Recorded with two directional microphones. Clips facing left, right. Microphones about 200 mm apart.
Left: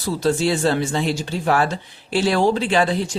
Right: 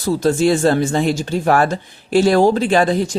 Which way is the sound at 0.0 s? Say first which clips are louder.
Right 4 dB; 45° right (ahead or behind).